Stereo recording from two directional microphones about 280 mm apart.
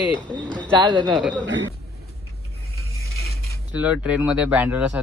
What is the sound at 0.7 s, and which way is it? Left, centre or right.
Speech, centre.